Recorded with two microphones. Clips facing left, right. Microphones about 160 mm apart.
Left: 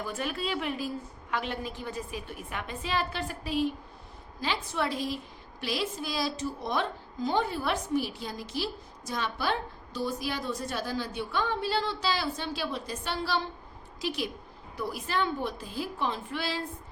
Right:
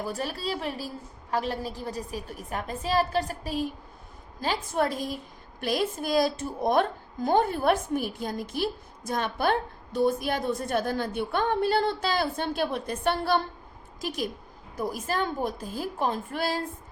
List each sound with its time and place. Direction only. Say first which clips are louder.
0.0 s a woman's voice: right 2 dB; 35° right (ahead or behind)